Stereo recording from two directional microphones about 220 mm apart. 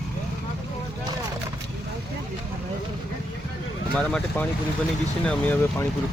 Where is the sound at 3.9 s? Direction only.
5° left (ahead or behind).